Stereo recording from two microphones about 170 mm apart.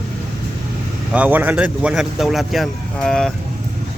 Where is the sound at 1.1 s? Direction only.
10° right (ahead or behind).